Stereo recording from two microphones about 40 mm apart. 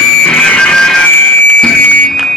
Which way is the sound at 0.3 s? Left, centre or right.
Left.